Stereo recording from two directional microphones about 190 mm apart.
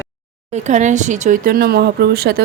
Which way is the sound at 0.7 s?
40° right (ahead or behind).